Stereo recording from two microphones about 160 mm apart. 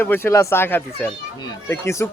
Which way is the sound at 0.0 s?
15° left (ahead or behind).